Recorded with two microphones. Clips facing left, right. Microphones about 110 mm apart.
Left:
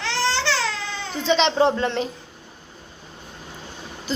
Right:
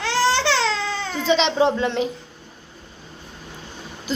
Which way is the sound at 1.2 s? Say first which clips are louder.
Even; 5° right (ahead or behind).